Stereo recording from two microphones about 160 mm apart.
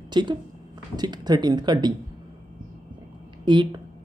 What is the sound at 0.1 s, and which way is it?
Speech, 30° right (ahead or behind).